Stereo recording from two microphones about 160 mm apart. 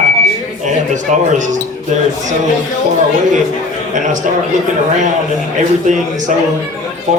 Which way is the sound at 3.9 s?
50° right (ahead or behind).